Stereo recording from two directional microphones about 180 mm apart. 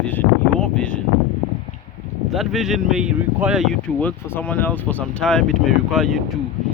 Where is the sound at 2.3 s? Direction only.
Centre (ahead or behind).